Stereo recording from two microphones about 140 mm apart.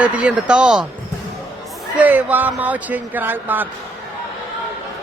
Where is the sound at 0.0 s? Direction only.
10° right (ahead or behind).